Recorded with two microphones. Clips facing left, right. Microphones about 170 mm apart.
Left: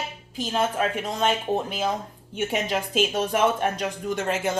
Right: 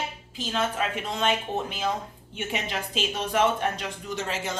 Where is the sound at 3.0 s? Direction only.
50° left (ahead or behind).